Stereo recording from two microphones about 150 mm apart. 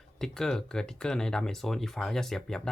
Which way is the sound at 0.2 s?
5° left (ahead or behind).